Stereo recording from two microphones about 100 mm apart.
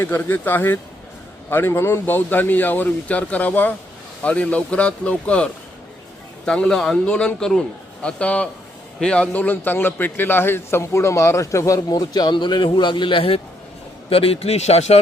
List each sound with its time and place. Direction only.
0.0 s a man's voice: 20° left (ahead or behind); by 13.4 s 65° left (ahead or behind)
14.1 s speech: 75° left (ahead or behind)